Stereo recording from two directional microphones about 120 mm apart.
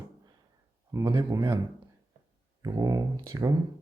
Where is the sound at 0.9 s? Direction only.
25° right (ahead or behind).